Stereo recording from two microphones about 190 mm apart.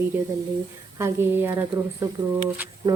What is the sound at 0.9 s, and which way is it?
Speech, 15° right (ahead or behind).